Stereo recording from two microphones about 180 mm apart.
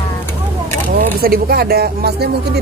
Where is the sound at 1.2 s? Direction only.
60° right (ahead or behind).